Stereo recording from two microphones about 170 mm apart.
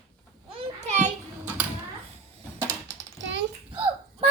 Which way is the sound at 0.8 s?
45° right (ahead or behind).